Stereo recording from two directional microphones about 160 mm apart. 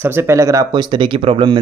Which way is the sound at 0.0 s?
15° right (ahead or behind).